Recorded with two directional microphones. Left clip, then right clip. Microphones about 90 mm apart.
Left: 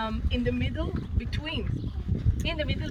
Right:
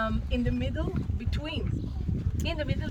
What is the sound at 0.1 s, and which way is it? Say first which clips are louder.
Speech: left 2 dB; 50° right (ahead or behind).